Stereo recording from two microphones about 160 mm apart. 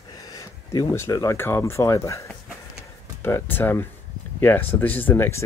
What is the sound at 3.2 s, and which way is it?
Speech, 15° left (ahead or behind).